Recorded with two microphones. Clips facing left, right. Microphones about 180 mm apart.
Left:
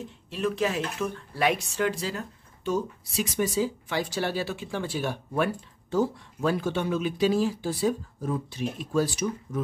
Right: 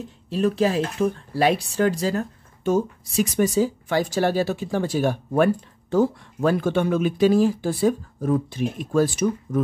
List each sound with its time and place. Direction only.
0.3 s speech: 35° right (ahead or behind); by 9.6 s 55° right (ahead or behind)